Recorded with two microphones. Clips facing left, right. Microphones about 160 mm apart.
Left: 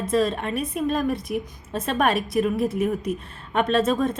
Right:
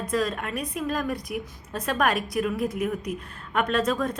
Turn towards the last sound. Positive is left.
turn(degrees=25)  # may be behind; listen again after turning